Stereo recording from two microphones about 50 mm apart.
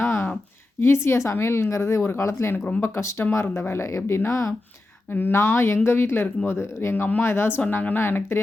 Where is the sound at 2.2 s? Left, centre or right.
Left.